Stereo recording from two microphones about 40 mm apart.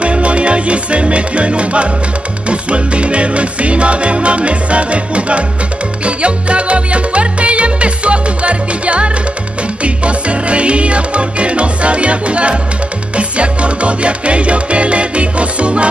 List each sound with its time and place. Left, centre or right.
0.0 s music: right